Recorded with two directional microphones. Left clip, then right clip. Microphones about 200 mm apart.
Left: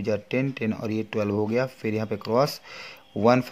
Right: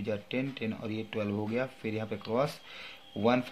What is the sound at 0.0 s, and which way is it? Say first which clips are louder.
Speech: left 8 dB; 50° left (ahead or behind).